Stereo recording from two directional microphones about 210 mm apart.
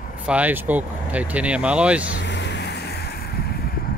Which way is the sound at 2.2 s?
55° left (ahead or behind).